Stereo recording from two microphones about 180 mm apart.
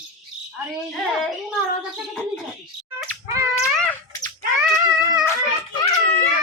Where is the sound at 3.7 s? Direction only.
5° left (ahead or behind).